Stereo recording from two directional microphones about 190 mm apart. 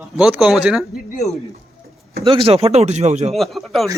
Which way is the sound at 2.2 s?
30° right (ahead or behind).